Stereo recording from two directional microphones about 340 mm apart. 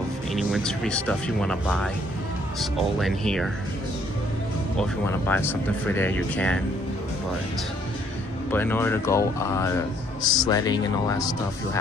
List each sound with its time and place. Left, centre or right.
0.3 s speech: centre
5.3 s speech: centre
8.5 s speech: centre